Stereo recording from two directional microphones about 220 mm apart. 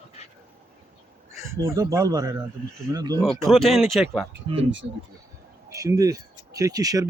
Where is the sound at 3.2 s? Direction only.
Centre (ahead or behind).